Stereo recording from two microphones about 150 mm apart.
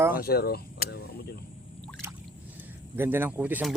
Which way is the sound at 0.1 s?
90° left.